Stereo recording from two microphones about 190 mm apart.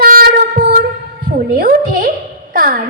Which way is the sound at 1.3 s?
50° right (ahead or behind).